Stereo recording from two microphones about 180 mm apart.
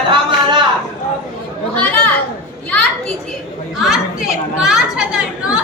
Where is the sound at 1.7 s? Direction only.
10° left (ahead or behind).